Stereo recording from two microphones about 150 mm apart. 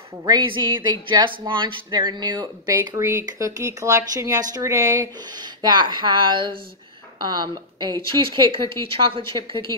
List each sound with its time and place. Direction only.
0.2 s speech: 30° right (ahead or behind)